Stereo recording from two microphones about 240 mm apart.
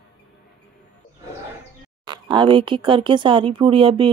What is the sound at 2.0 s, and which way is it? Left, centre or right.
Speech, centre.